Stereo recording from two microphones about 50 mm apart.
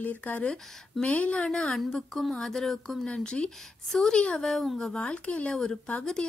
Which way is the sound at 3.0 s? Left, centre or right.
Centre.